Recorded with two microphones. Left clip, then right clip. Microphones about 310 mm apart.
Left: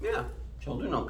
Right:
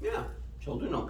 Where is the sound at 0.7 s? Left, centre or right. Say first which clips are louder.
Even; centre.